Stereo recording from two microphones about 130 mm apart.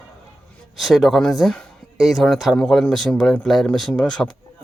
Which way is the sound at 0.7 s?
Centre (ahead or behind).